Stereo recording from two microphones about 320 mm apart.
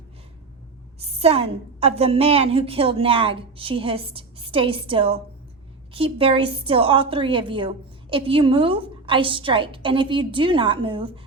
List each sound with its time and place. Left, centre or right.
0.9 s a woman's voice: centre